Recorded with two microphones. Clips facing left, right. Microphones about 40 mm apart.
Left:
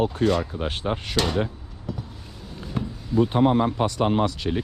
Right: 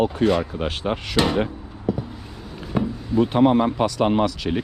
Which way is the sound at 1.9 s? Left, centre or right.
Centre.